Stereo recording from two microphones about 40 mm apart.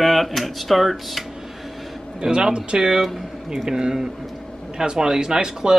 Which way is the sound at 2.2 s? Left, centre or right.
Centre.